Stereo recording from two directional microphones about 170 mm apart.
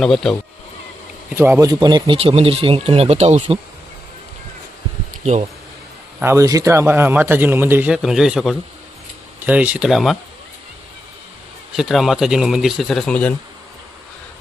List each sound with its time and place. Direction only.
0.0 s speech: 5° left (ahead or behind)
1.4 s speech: 15° right (ahead or behind); by 3.6 s 40° right (ahead or behind)
5.2 s speech: 40° right (ahead or behind)
6.1 s a man's voice: 15° right (ahead or behind); by 10.2 s centre (ahead or behind)
11.7 s speech: centre (ahead or behind)